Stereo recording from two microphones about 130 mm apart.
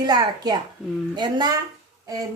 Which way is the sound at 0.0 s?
30° right (ahead or behind).